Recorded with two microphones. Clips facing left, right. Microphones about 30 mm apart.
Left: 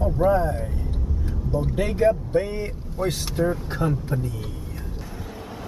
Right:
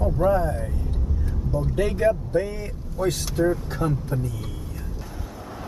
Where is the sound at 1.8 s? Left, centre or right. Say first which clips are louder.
Even; centre.